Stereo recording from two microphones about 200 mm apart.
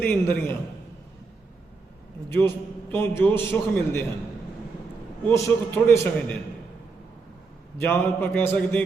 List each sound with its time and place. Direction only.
0.0 s a man's voice: 10° left (ahead or behind)
2.9 s a man's voice: 10° left (ahead or behind)
5.3 s a man's voice: 15° left (ahead or behind)
7.8 s a man's voice: 10° left (ahead or behind)